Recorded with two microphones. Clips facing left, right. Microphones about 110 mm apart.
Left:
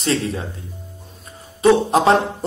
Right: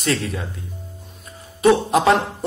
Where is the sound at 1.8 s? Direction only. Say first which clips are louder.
Left 1 dB; 30° left (ahead or behind).